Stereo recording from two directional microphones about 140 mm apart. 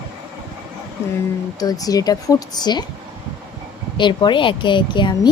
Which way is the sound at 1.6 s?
25° left (ahead or behind).